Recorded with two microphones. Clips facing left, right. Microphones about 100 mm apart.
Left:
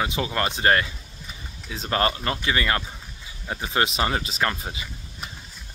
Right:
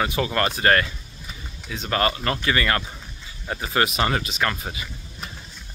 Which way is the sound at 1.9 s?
25° left (ahead or behind).